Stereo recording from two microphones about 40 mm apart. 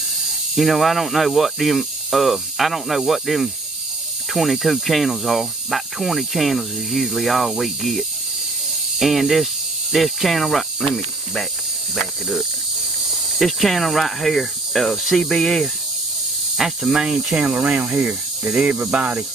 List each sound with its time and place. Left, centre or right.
0.6 s speech: centre
11.9 s speech: centre
16.5 s speech: centre
17.4 s speech: right